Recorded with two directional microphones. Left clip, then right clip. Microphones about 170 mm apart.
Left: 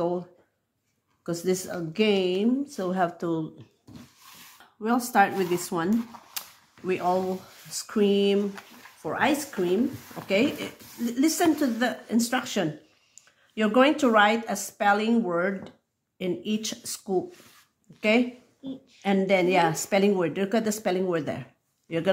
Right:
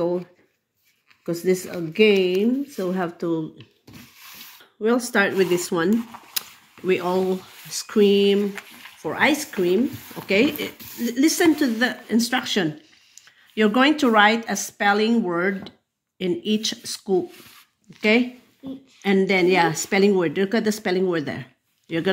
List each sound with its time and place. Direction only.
1.2 s a woman's voice: 5° left (ahead or behind)
4.8 s speech: 10° right (ahead or behind)
6.4 s camera: 10° right (ahead or behind)
6.9 s a woman's voice: 15° right (ahead or behind)
18.9 s a woman's voice: centre (ahead or behind)